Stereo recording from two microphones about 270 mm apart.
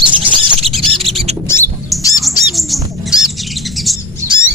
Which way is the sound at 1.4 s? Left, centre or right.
Centre.